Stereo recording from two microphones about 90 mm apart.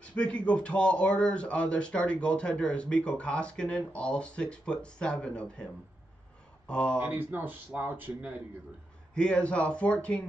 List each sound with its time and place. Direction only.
0.0 s speech: 15° left (ahead or behind)
6.7 s speech: 10° left (ahead or behind)
7.0 s speech: 20° right (ahead or behind)
9.1 s speech: 10° left (ahead or behind)